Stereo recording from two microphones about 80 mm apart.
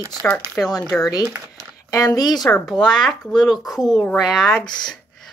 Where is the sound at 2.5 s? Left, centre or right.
Centre.